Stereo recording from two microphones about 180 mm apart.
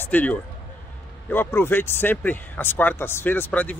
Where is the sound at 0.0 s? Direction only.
10° left (ahead or behind).